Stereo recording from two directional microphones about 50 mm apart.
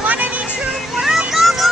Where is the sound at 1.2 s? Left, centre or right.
Centre.